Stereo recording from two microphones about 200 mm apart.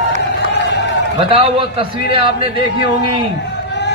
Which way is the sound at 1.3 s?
25° right (ahead or behind).